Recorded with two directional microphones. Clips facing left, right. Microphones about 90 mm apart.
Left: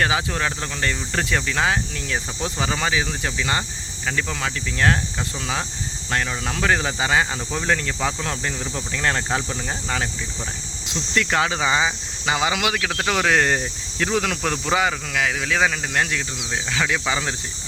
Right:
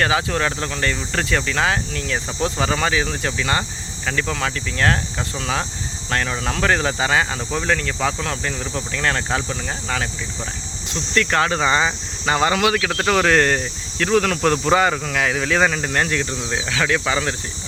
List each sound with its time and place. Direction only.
0.0 s speech: 15° left (ahead or behind)
6.1 s speech: 10° left (ahead or behind)
16.9 s speech: 10° left (ahead or behind)